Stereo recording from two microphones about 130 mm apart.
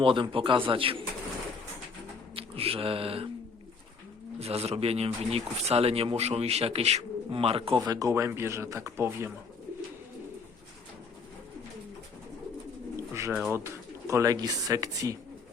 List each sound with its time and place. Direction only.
0.0 s speech: 40° right (ahead or behind)
2.3 s speech: 45° right (ahead or behind)
4.4 s speech: 50° right (ahead or behind)
7.8 s speech: 25° right (ahead or behind)
13.5 s speech: 20° right (ahead or behind)